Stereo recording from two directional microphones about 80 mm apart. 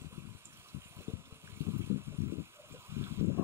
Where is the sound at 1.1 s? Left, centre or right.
Right.